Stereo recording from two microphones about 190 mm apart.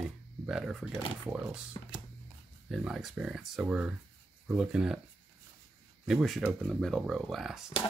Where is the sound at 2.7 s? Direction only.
Centre (ahead or behind).